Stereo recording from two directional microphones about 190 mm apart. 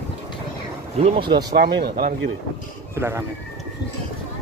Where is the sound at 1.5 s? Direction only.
55° right (ahead or behind).